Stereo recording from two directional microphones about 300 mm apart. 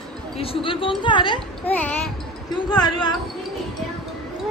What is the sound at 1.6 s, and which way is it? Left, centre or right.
A woman's voice, centre.